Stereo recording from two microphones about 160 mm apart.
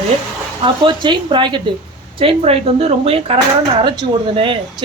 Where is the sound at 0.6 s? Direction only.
30° right (ahead or behind).